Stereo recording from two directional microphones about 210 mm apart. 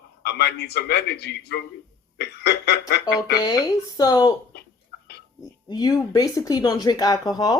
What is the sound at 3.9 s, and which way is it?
Speech, 20° left (ahead or behind).